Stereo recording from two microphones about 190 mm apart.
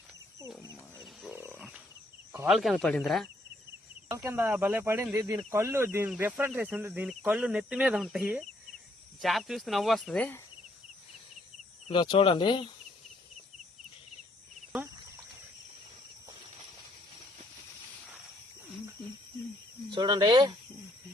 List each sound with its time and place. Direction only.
0.9 s wild animals: centre (ahead or behind)
2.5 s speech: centre (ahead or behind)
4.1 s speech: 15° right (ahead or behind); by 10.4 s 5° left (ahead or behind)
11.9 s speech: 25° left (ahead or behind)
19.9 s speech: 25° right (ahead or behind)